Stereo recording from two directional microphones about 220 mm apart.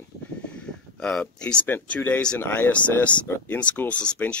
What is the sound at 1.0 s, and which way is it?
Speech, 5° left (ahead or behind).